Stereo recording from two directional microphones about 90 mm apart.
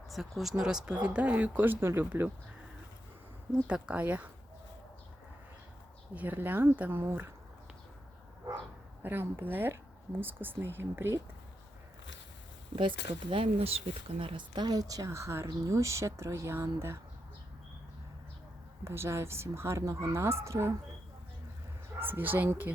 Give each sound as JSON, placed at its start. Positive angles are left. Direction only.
{"t": 0.1, "sound": "speech", "side_deg": 0}
{"t": 3.5, "sound": "speech", "side_deg": -15}
{"t": 6.1, "sound": "speech", "side_deg": -20}
{"t": 9.0, "sound": "speech", "side_deg": -25}
{"t": 12.7, "sound": "speech", "side_deg": -70}
{"t": 18.9, "sound": "speech", "side_deg": -30}
{"t": 21.9, "sound": "speech", "side_deg": -25}